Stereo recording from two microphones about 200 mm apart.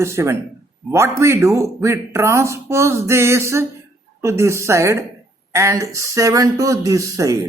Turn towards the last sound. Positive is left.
turn(degrees=-15)  # may be behind; listen again after turning